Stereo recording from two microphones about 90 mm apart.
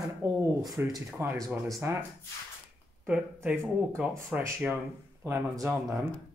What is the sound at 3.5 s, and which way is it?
Speech, 25° right (ahead or behind).